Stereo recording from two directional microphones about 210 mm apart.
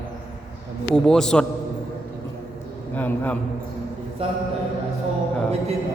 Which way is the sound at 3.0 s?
10° left (ahead or behind).